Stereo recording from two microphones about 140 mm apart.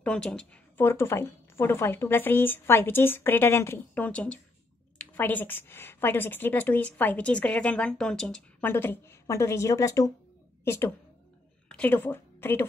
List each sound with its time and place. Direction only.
0.0 s a woman's voice: 5° left (ahead or behind)